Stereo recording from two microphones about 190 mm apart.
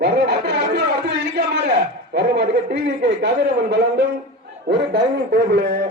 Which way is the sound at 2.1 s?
60° right (ahead or behind).